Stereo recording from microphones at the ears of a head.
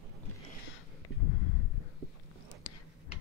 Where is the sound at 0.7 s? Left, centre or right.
Left.